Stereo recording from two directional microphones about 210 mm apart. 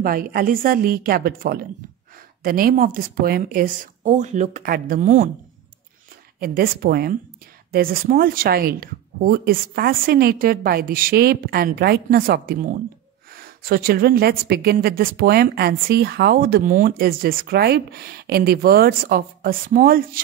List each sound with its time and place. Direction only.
0.0 s a woman's voice: 45° right (ahead or behind)
6.4 s a woman's voice: 45° right (ahead or behind)